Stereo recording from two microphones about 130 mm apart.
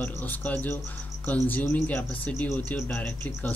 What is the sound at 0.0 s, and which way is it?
Speech, 15° left (ahead or behind).